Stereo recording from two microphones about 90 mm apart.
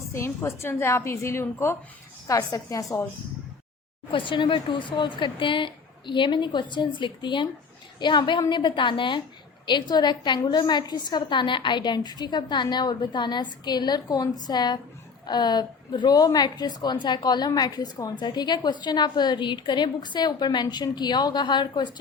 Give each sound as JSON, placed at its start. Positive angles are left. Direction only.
{"t": 0.1, "sound": "a woman's voice", "side_deg": 30}
{"t": 4.1, "sound": "a woman's voice", "side_deg": 65}